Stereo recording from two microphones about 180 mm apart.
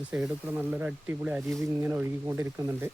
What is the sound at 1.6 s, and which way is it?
Speech, 15° right (ahead or behind).